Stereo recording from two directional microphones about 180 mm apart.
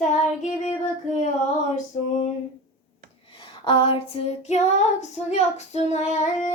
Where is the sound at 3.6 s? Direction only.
30° left (ahead or behind).